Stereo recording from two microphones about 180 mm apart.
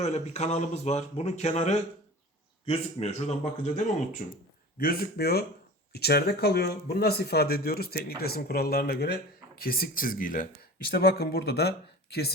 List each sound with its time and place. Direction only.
0.0 s speech: 40° left (ahead or behind)
4.8 s speech: 55° left (ahead or behind)
10.9 s speech: 60° left (ahead or behind)